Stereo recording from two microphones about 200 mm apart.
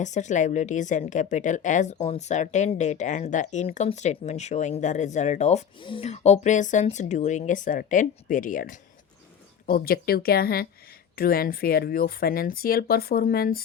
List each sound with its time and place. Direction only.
0.0 s a woman's voice: 35° left (ahead or behind)